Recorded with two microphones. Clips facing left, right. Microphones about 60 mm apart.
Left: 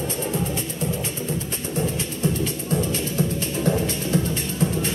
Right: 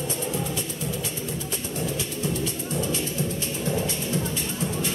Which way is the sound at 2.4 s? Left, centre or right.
Left.